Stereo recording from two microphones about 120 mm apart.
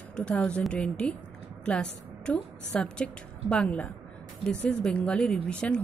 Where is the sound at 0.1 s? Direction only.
5° left (ahead or behind).